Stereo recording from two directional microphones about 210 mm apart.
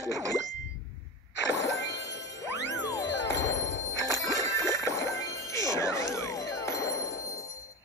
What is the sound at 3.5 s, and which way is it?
Music, 15° left (ahead or behind).